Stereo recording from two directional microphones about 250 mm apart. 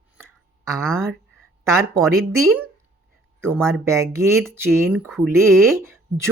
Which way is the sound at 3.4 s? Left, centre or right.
Centre.